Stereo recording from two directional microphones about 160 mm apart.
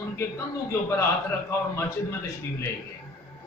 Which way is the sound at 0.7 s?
15° left (ahead or behind).